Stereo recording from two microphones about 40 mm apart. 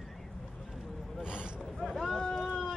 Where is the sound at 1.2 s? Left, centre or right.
Right.